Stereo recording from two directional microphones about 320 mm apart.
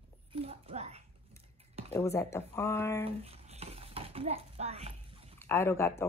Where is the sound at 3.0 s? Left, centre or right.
Centre.